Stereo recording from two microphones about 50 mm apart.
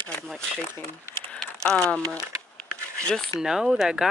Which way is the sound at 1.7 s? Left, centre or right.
Centre.